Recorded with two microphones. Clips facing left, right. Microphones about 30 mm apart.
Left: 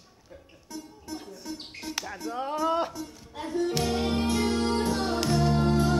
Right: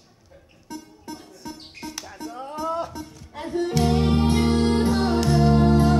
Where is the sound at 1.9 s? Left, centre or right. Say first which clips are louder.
Left 5 dB; left.